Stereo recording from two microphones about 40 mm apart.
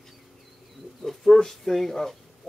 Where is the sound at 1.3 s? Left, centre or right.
Centre.